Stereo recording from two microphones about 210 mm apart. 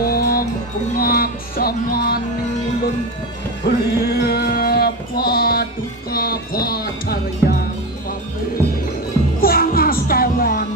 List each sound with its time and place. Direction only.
0.1 s music: 45° left (ahead or behind)
3.6 s child singing: 50° left (ahead or behind)
6.1 s music: 45° left (ahead or behind)
9.4 s music: 45° left (ahead or behind)